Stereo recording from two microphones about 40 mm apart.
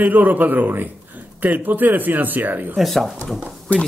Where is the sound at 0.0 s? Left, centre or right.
Right.